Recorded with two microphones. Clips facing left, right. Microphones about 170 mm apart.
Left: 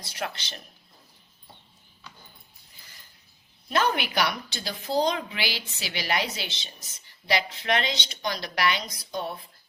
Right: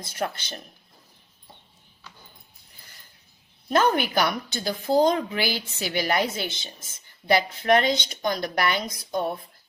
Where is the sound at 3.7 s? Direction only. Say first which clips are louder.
Right 4 dB; 45° right (ahead or behind).